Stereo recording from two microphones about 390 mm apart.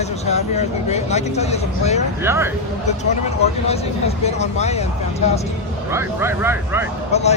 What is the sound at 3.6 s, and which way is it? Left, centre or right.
Speech, centre.